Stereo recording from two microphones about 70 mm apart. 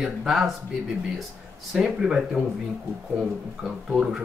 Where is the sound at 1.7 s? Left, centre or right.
Centre.